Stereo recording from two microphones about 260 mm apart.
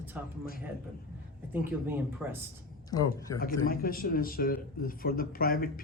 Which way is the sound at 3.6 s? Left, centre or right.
Left.